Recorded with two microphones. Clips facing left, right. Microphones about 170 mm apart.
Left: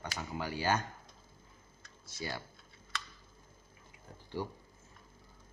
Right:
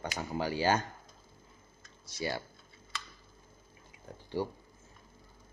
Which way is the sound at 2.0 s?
80° right.